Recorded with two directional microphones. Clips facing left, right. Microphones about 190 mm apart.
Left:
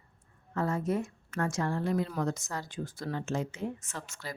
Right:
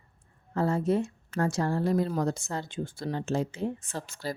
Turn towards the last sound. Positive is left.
turn(degrees=-35)  # may be behind; listen again after turning